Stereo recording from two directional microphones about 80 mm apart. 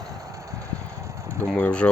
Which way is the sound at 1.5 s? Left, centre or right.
Centre.